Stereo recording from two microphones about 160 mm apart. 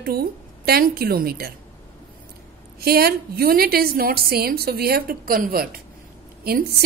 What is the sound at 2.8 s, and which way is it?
A woman's voice, 70° right (ahead or behind).